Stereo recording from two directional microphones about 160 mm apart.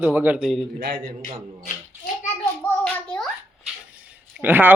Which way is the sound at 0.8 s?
85° right.